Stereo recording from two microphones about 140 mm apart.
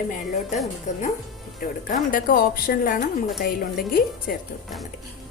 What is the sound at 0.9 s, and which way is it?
Speech, 55° left (ahead or behind).